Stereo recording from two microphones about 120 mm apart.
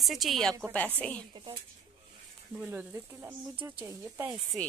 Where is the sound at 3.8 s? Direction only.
20° right (ahead or behind).